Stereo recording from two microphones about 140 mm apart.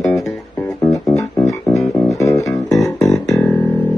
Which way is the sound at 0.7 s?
25° left (ahead or behind).